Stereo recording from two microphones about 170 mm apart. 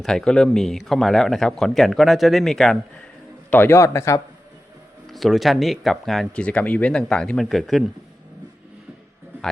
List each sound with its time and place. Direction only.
0.0 s speech: 5° left (ahead or behind)
3.5 s a man's voice: 10° left (ahead or behind)
5.0 s speech: centre (ahead or behind)